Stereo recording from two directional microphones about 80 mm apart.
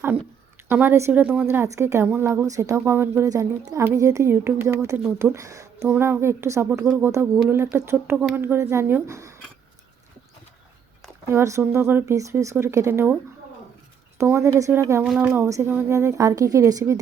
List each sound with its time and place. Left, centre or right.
0.7 s speech: right
1.6 s a woman's voice: right
3.2 s speech: right
3.8 s a woman's voice: right
5.9 s a woman's voice: right
9.0 s a woman's voice: right
11.3 s a woman's voice: right
12.1 s a woman's voice: right
14.2 s a woman's voice: right
15.0 s speech: centre
15.4 s a woman's voice: right